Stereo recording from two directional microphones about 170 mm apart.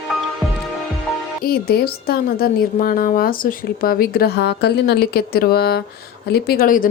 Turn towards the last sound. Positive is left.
turn(degrees=55)  # may be behind; listen again after turning